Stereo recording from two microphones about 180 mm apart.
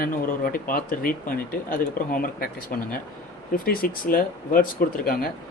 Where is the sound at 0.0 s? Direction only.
55° left (ahead or behind).